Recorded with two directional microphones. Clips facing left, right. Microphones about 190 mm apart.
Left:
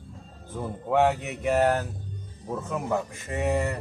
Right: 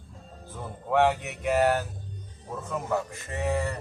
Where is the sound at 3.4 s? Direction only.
15° left (ahead or behind).